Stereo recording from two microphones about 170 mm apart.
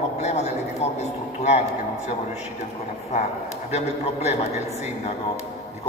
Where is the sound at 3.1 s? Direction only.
40° left (ahead or behind).